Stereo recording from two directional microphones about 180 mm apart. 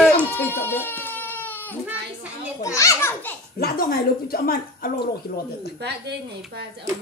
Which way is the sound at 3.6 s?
55° left (ahead or behind).